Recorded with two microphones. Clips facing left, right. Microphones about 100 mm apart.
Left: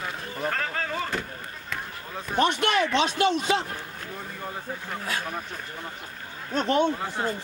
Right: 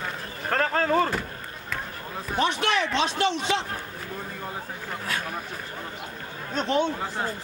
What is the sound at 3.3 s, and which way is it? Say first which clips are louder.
Speech: left 2 dB; 10° left (ahead or behind).